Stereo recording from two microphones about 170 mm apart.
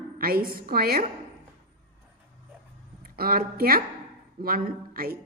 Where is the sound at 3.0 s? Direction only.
60° right (ahead or behind).